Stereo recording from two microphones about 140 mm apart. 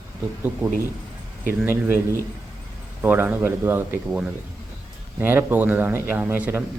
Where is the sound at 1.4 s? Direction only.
15° right (ahead or behind).